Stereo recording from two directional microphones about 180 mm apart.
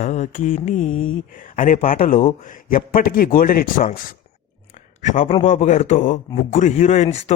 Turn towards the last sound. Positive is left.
turn(degrees=40)  # may be behind; listen again after turning